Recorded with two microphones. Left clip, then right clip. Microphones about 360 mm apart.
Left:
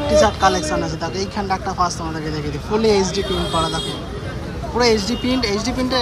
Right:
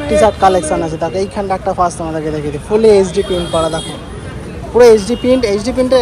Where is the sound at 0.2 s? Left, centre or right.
Centre.